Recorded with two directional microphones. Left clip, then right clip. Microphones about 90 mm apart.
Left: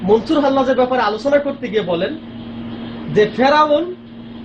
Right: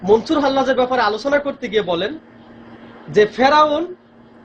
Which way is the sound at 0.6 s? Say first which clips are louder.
Left 1 dB; 30° right (ahead or behind).